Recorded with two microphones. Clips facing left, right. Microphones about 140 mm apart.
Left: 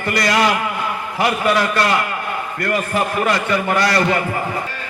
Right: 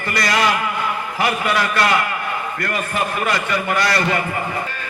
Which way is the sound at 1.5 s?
35° left (ahead or behind).